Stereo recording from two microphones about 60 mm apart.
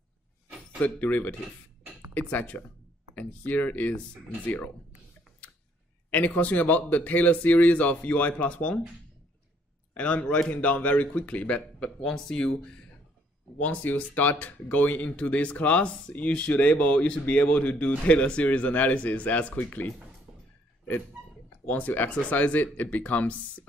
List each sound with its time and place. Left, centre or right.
0.7 s a man's voice: left
6.0 s a man's voice: left
9.9 s a man's voice: centre
13.6 s a man's voice: left
21.6 s a man's voice: left